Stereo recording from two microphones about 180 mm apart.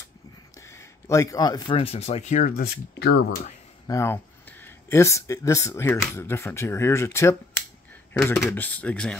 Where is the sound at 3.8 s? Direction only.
15° left (ahead or behind).